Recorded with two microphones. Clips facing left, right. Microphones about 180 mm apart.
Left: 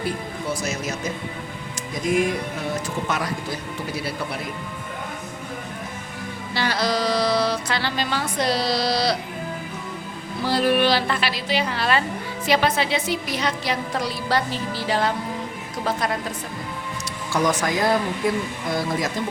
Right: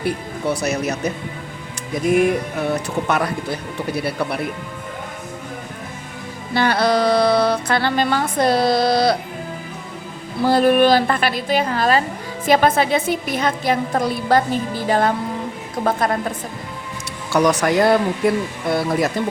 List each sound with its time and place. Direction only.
0.0 s speech: 65° right (ahead or behind)
6.5 s music: 55° right (ahead or behind)
10.4 s music: 50° right (ahead or behind)
17.3 s speech: 70° right (ahead or behind)